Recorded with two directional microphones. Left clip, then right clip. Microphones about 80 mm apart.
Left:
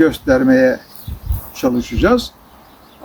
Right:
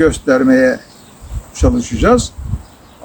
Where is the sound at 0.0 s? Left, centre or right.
Right.